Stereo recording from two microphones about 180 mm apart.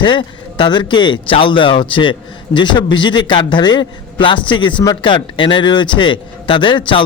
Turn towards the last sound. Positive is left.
turn(degrees=25)  # may be behind; listen again after turning